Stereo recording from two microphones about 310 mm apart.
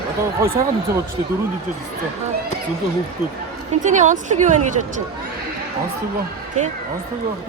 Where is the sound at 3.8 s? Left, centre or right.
Right.